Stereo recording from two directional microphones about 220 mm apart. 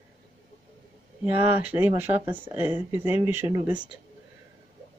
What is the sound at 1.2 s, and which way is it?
Speech, 5° right (ahead or behind).